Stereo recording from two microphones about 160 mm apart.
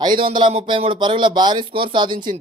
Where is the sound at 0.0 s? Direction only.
30° right (ahead or behind).